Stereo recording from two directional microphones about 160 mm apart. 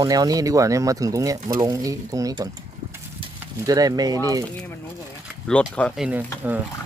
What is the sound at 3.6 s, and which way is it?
Speech, 25° right (ahead or behind).